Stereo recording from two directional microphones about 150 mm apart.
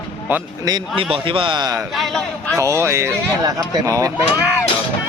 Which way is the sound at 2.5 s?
20° right (ahead or behind).